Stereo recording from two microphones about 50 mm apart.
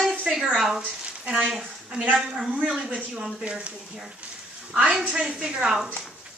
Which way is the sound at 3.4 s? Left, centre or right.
Right.